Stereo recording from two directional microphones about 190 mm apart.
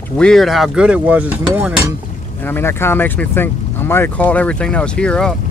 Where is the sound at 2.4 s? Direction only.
10° left (ahead or behind).